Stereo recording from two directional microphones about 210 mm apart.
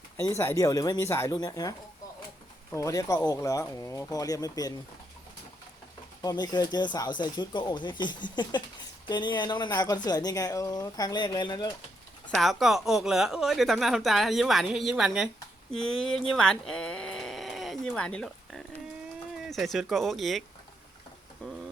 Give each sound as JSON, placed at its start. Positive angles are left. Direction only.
{"t": 0.2, "sound": "speech", "side_deg": 10}
{"t": 2.7, "sound": "speech", "side_deg": 15}
{"t": 6.2, "sound": "a woman's voice", "side_deg": 20}
{"t": 12.3, "sound": "a woman's voice", "side_deg": 0}
{"t": 16.3, "sound": "a sound", "side_deg": 5}
{"t": 19.4, "sound": "a woman's voice", "side_deg": 0}
{"t": 21.4, "sound": "speech", "side_deg": 5}